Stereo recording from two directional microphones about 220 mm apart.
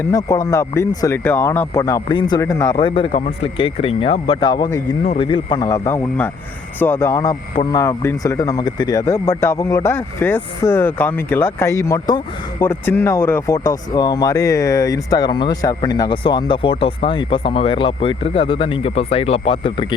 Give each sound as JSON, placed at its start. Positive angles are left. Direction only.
{"t": 0.0, "sound": "speech", "side_deg": 15}